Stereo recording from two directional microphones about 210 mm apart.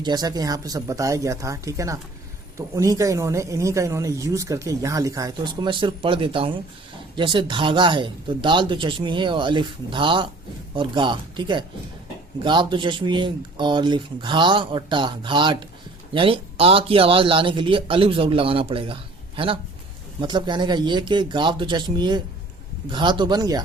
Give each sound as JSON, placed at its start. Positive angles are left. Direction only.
{"t": 0.0, "sound": "speech", "side_deg": -20}
{"t": 20.2, "sound": "speech", "side_deg": -20}